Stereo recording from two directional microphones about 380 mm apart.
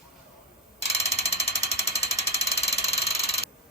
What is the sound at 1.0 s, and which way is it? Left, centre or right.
Ratchet, centre.